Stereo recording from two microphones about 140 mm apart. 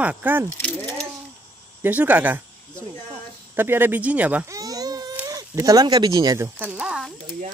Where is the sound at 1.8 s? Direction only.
10° right (ahead or behind).